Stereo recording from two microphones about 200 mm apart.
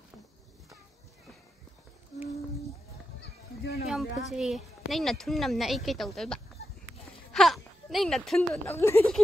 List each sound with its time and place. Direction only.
3.2 s a sound: 55° left (ahead or behind)
3.9 s speech: centre (ahead or behind)
8.6 s a woman's voice: 10° left (ahead or behind)